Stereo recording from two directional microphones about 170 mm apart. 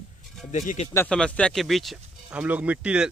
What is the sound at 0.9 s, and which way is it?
A man's voice, 5° left (ahead or behind).